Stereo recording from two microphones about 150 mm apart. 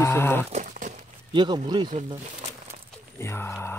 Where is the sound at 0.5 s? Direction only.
60° right (ahead or behind).